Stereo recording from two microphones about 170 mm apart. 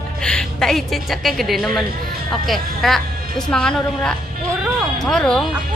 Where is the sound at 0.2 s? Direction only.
5° left (ahead or behind).